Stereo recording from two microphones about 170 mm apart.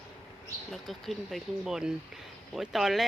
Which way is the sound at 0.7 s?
Centre (ahead or behind).